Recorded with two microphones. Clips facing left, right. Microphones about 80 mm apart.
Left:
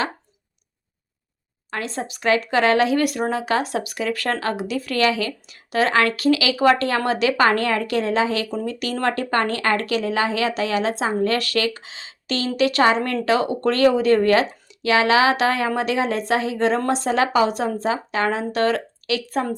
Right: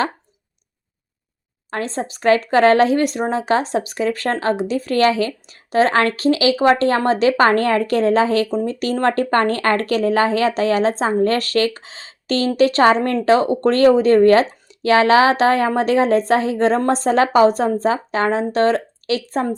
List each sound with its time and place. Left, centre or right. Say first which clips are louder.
1.7 s speech: right 4 dB; right